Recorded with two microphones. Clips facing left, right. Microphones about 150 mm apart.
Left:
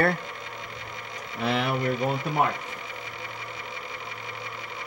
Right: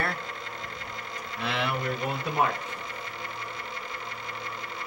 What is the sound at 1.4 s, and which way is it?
Speech, 45° left (ahead or behind).